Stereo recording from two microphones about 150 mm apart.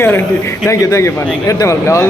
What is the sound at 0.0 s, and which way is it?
A man's voice, 15° left (ahead or behind).